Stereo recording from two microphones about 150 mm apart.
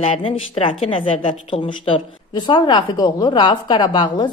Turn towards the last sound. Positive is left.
turn(degrees=30)  # may be behind; listen again after turning